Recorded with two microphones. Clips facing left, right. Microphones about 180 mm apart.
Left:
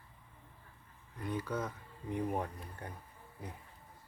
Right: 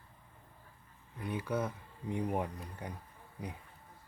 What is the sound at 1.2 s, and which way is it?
Speech, 10° right (ahead or behind).